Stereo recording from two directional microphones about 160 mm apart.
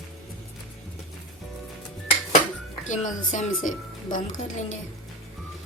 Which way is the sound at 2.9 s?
50° left (ahead or behind).